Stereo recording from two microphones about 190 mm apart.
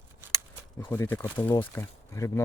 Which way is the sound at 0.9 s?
10° left (ahead or behind).